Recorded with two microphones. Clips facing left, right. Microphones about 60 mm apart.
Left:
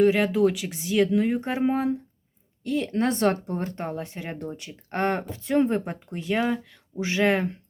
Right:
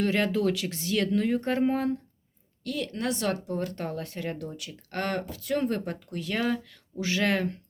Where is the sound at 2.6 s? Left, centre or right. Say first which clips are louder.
Left 6 dB; left.